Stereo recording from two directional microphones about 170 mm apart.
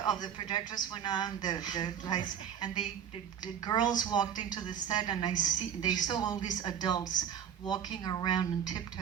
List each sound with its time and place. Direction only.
0.0 s a man's voice: 25° left (ahead or behind)